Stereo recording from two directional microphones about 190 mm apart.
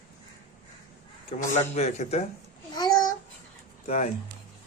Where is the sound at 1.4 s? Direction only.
35° left (ahead or behind).